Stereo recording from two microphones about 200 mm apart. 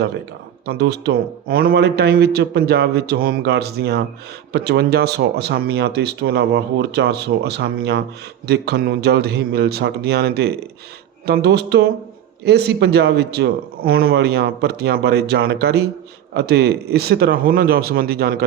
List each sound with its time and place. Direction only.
0.6 s a man's voice: 55° right (ahead or behind)